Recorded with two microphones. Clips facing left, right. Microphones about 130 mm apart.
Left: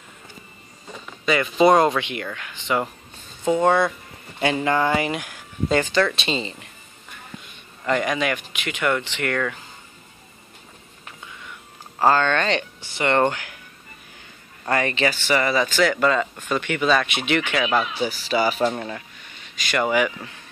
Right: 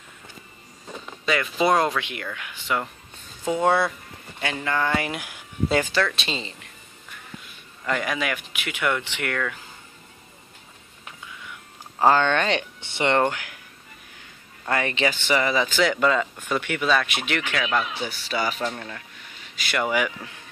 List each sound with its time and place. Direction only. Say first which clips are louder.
1.2 s speech: left 5 dB; centre (ahead or behind)
4.4 s speech: left 5 dB; 25° left (ahead or behind)
4.9 s speech: left 3 dB; centre (ahead or behind)
7.8 s speech: left 4 dB; centre (ahead or behind)
12.0 s speech: even; 15° right (ahead or behind)
12.8 s speech: right 1 dB; 25° right (ahead or behind)
13.1 s speech: left 2 dB; 5° right (ahead or behind)
14.7 s speech: left 2 dB; 10° right (ahead or behind); by 19.0 s 15° left (ahead or behind)
19.5 s speech: left 3 dB; 10° right (ahead or behind)